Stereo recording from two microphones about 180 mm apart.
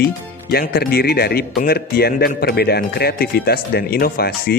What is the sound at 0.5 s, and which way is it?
A man's voice, 55° left (ahead or behind).